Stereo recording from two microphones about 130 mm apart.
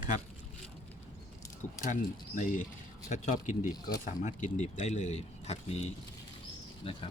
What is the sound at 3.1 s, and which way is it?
Speech, 70° left (ahead or behind).